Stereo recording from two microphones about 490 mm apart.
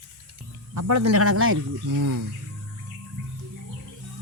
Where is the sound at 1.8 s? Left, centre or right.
Right.